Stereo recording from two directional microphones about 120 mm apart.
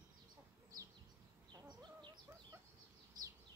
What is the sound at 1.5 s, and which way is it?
Bird, 35° right (ahead or behind).